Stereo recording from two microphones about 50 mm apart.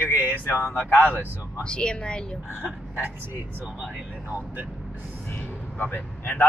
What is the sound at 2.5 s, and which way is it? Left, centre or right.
Speech, right.